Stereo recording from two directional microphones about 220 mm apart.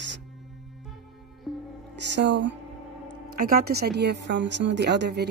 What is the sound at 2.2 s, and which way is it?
Speech, 55° right (ahead or behind).